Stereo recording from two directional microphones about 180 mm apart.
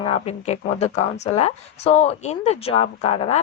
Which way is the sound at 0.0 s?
35° left (ahead or behind).